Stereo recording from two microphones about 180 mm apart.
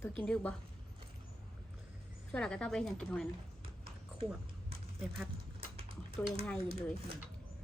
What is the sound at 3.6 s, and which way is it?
Clip-clop, 30° right (ahead or behind).